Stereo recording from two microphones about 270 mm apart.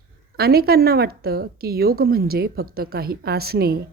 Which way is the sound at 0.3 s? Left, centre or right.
Right.